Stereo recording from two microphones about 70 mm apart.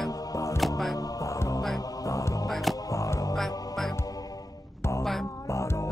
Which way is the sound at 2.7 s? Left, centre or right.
Left.